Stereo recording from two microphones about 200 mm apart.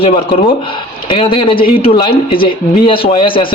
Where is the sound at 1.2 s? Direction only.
25° left (ahead or behind).